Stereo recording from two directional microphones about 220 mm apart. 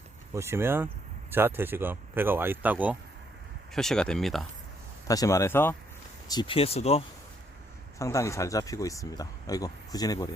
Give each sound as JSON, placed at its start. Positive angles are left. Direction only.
{"t": 0.3, "sound": "speech", "side_deg": -10}
{"t": 5.0, "sound": "speech", "side_deg": 15}
{"t": 7.9, "sound": "speech", "side_deg": 15}